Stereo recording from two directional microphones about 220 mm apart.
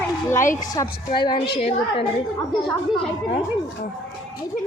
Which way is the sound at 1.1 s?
20° left (ahead or behind).